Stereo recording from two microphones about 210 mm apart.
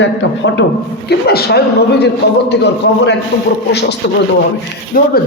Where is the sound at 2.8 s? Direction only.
60° left (ahead or behind).